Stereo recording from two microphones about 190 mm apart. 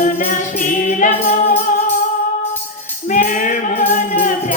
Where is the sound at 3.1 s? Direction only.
45° left (ahead or behind).